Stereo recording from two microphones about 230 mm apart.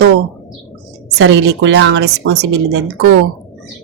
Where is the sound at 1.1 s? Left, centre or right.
Right.